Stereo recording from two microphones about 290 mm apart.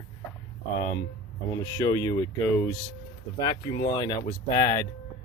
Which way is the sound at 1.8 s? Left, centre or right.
Centre.